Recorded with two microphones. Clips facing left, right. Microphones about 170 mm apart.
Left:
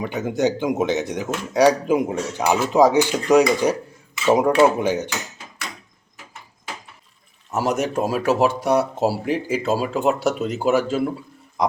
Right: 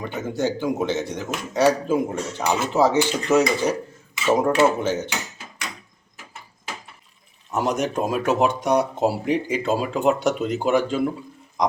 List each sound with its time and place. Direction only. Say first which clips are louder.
0.0 s speech: left 4 dB; 15° left (ahead or behind)
7.5 s speech: left 1 dB; 5° left (ahead or behind)